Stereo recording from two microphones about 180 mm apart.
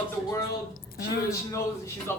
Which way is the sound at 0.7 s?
55° left (ahead or behind).